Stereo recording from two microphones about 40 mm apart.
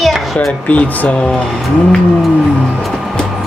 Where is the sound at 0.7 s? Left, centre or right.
Left.